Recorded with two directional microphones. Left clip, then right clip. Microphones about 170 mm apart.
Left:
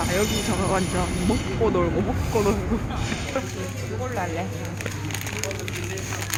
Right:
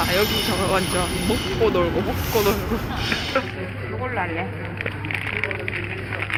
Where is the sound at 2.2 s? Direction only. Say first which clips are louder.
Right 3 dB; 20° left (ahead or behind).